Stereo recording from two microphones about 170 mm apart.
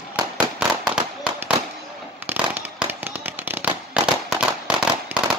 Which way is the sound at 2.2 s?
10° right (ahead or behind).